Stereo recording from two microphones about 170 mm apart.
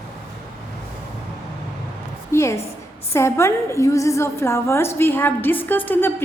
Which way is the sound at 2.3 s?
15° left (ahead or behind).